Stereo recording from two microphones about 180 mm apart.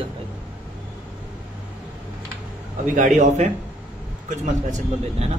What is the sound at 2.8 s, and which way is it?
A man's voice, 45° right (ahead or behind).